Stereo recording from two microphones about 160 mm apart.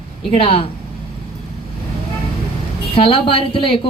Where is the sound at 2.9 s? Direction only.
35° left (ahead or behind).